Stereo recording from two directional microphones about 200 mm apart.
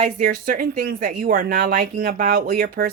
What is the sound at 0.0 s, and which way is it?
Speech, 40° right (ahead or behind).